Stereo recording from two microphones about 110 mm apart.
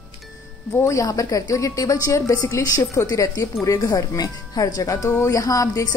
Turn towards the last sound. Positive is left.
turn(degrees=30)  # may be behind; listen again after turning